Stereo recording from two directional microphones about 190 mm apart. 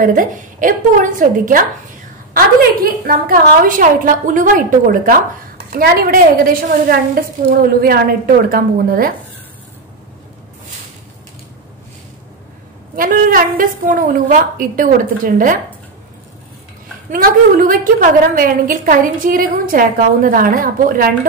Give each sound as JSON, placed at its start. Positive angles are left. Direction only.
{"t": 0.0, "sound": "a woman's voice", "side_deg": -45}
{"t": 12.9, "sound": "a woman's voice", "side_deg": -45}
{"t": 17.1, "sound": "a woman's voice", "side_deg": -50}